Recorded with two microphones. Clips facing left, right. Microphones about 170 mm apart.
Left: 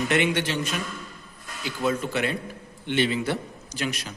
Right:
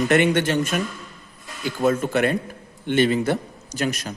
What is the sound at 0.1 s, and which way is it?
A man's voice, 50° right (ahead or behind).